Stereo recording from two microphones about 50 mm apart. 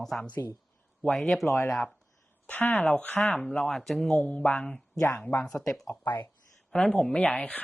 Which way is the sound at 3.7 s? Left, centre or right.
Centre.